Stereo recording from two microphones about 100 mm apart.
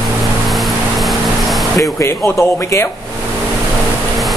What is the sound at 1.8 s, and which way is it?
Speech, 30° left (ahead or behind).